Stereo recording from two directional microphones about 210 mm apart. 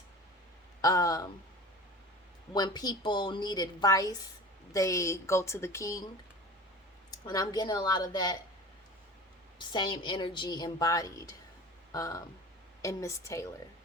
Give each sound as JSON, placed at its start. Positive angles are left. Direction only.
{"t": 0.8, "sound": "a woman's voice", "side_deg": 15}
{"t": 2.5, "sound": "a woman's voice", "side_deg": 20}
{"t": 7.3, "sound": "a woman's voice", "side_deg": 20}
{"t": 9.6, "sound": "a woman's voice", "side_deg": 20}